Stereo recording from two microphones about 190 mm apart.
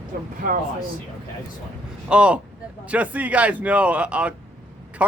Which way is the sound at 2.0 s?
5° right (ahead or behind).